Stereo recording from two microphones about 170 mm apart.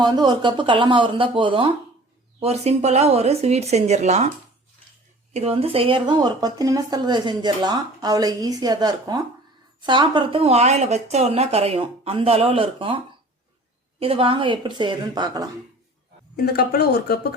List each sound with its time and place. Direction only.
0.0 s speech: 25° right (ahead or behind); by 4.3 s 40° right (ahead or behind)
5.3 s speech: 35° right (ahead or behind)
14.0 s speech: 30° right (ahead or behind)
16.3 s speech: 65° left (ahead or behind)